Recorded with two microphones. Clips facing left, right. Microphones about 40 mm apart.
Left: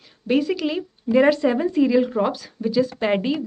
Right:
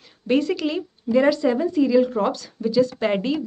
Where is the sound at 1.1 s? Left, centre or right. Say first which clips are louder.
Left 1 dB; left.